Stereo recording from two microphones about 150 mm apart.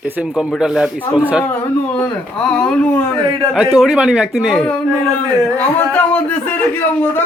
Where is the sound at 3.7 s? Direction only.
5° right (ahead or behind).